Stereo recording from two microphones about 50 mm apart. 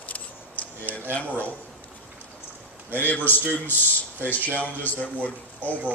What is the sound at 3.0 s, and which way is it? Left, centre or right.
Speech, left.